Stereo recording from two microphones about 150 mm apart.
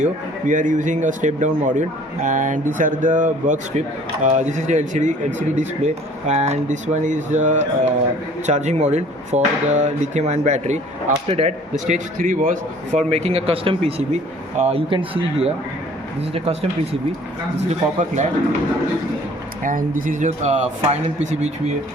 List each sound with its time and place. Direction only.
0.0 s a man's voice: 60° right (ahead or behind)
11.9 s a man's voice: 60° right (ahead or behind); by 16.6 s 40° right (ahead or behind)
17.7 s a man's voice: 50° right (ahead or behind)
19.6 s a man's voice: 65° right (ahead or behind); by 21.5 s 50° right (ahead or behind)